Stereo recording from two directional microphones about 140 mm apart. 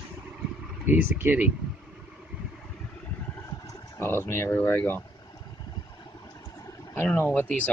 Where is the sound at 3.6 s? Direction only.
20° left (ahead or behind).